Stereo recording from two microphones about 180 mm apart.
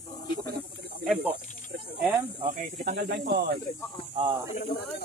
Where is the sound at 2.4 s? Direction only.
45° right (ahead or behind); by 3.5 s 65° right (ahead or behind).